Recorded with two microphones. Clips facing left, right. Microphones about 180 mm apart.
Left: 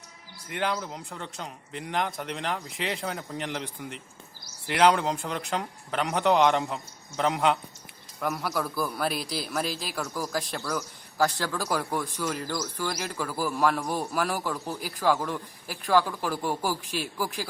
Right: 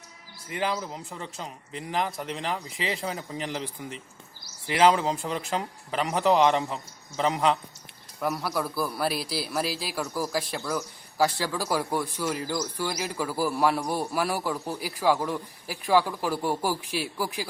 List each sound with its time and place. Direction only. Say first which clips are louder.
0.4 s a man's voice: even; centre (ahead or behind)